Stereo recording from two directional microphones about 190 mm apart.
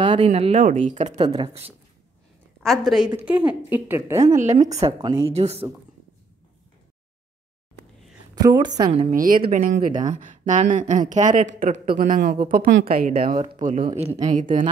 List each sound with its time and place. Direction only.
0.0 s speech: 30° right (ahead or behind)
2.6 s a woman's voice: centre (ahead or behind)
4.4 s speech: 35° right (ahead or behind)
8.4 s a woman's voice: 20° right (ahead or behind)
8.9 s a woman's voice: 40° right (ahead or behind)
13.7 s speech: 35° right (ahead or behind)